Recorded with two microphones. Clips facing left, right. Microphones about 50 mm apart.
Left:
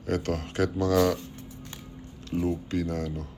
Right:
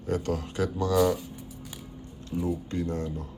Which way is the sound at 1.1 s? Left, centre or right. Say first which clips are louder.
Right 1 dB; centre.